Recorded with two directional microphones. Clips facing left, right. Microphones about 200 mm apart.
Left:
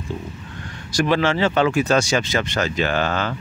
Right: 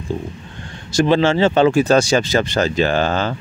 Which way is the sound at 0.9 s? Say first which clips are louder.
Right 4 dB; 25° right (ahead or behind).